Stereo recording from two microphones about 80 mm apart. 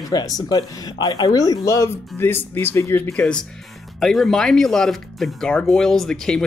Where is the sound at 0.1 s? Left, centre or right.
Left.